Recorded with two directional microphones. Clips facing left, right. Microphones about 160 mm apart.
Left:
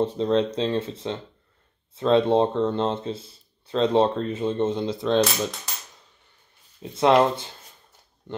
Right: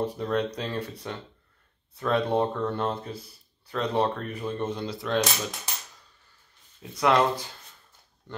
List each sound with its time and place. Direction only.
0.0 s speech: 25° left (ahead or behind)
6.8 s speech: 25° left (ahead or behind)